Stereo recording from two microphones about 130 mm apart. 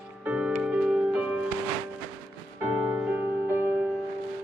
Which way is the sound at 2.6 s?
10° right (ahead or behind).